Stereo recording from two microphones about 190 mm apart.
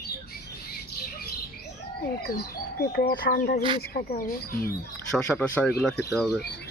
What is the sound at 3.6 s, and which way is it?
Speech, 25° right (ahead or behind).